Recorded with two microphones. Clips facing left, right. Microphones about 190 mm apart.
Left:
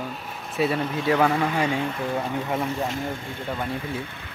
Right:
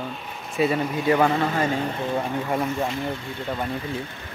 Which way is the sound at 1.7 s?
40° right (ahead or behind).